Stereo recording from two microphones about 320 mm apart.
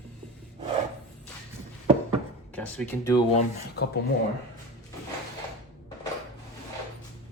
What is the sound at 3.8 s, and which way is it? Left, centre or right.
Speech, left.